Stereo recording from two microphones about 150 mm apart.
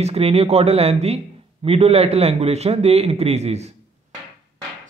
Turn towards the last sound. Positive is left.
turn(degrees=-45)  # may be behind; listen again after turning